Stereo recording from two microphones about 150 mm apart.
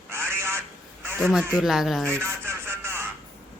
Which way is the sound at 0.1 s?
15° right (ahead or behind).